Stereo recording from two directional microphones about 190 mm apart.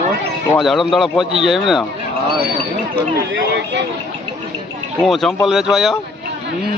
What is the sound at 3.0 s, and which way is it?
Speech, 65° right (ahead or behind).